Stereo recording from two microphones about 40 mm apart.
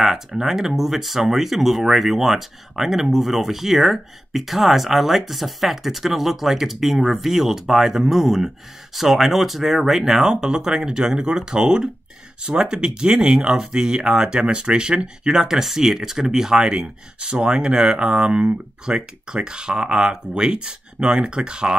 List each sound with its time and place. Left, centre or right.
0.0 s speech: centre